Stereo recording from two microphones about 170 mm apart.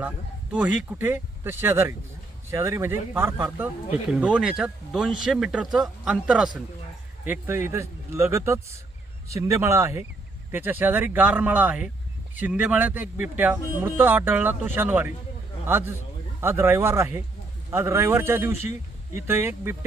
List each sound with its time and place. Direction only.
0.0 s speech: 5° right (ahead or behind)